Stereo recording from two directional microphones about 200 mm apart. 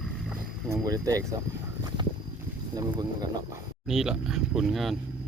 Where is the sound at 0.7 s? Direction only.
15° right (ahead or behind).